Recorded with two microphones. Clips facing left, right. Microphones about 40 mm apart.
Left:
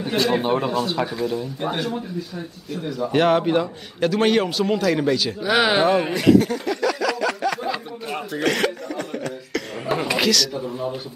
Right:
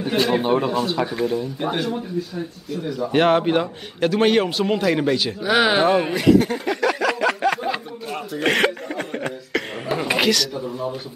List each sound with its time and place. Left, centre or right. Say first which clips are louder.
0.3 s speech: right 1 dB; centre
3.1 s a man's voice: right 1 dB; centre
6.3 s chuckle: even; centre
7.1 s a sound: right 3 dB; right
8.1 s speech: left 1 dB; centre
8.5 s chuckle: right 3 dB; right
10.0 s a man's voice: right 2 dB; centre
10.5 s speech: even; centre